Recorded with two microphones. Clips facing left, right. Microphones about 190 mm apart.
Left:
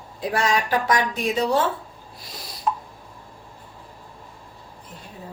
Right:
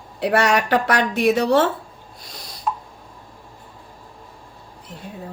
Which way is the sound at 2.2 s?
5° left (ahead or behind).